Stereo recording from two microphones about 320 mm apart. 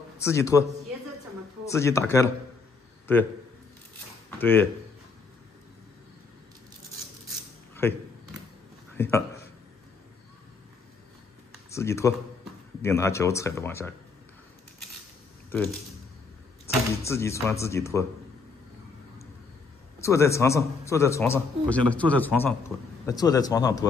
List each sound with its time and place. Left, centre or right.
0.2 s a man's voice: centre
4.4 s speech: centre
7.7 s a sound: centre
11.7 s a man's voice: centre
16.6 s a man's voice: centre
20.0 s a man's voice: centre